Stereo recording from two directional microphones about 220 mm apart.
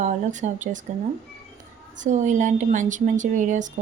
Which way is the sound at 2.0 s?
35° right (ahead or behind).